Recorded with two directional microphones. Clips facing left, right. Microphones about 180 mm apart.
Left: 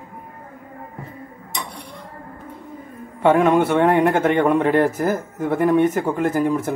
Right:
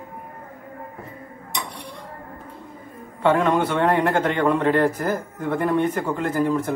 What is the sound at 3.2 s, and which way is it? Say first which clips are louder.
A man's voice: left 4 dB; 15° left (ahead or behind).